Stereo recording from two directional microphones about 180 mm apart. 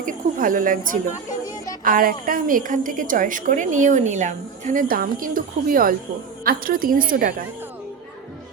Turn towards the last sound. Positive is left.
turn(degrees=-50)  # may be behind; listen again after turning